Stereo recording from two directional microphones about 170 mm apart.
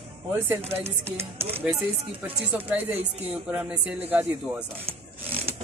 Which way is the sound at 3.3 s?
5° right (ahead or behind).